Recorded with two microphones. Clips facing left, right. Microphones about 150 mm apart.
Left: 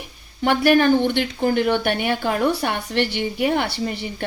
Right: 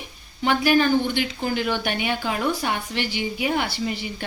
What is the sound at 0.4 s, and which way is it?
Speech, 60° left (ahead or behind).